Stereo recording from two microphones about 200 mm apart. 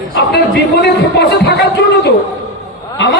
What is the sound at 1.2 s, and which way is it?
Music, 55° left (ahead or behind).